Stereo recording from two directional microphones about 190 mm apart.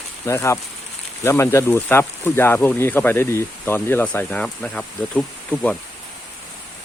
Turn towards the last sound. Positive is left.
turn(degrees=5)  # may be behind; listen again after turning